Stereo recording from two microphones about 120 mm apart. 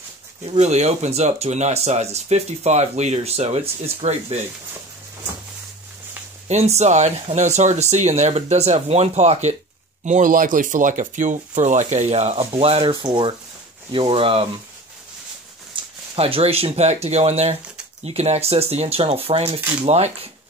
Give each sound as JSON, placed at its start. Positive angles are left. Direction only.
{"t": 0.5, "sound": "speech", "side_deg": -70}
{"t": 6.4, "sound": "speech", "side_deg": -70}
{"t": 10.0, "sound": "speech", "side_deg": -90}
{"t": 12.9, "sound": "speech", "side_deg": -40}
{"t": 15.7, "sound": "speech", "side_deg": -50}